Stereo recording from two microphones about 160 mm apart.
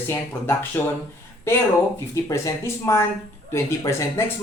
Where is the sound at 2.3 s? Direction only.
20° left (ahead or behind).